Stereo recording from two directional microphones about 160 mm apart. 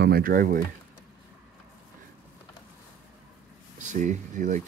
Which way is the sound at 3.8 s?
50° right (ahead or behind).